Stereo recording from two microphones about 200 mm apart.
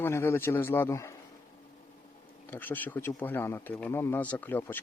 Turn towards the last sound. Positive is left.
turn(degrees=10)  # may be behind; listen again after turning